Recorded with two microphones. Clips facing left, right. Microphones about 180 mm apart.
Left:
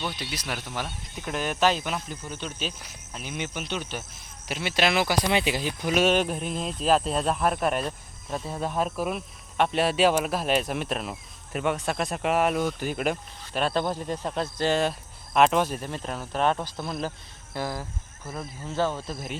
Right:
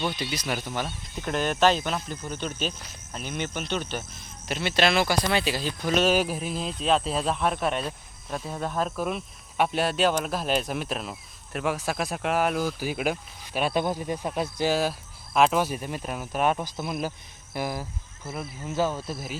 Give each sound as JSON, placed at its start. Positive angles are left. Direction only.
{"t": 0.1, "sound": "speech", "side_deg": 0}
{"t": 3.1, "sound": "speech", "side_deg": 0}
{"t": 6.1, "sound": "speech", "side_deg": -5}
{"t": 18.9, "sound": "speech", "side_deg": -5}